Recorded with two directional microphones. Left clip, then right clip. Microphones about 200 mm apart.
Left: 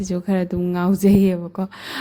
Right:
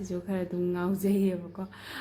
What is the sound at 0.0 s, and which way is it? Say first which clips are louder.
A woman's voice: left 10 dB; 45° left (ahead or behind).